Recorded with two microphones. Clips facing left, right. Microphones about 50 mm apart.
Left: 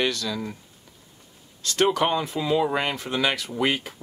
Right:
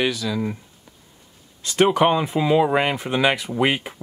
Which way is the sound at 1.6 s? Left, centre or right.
Centre.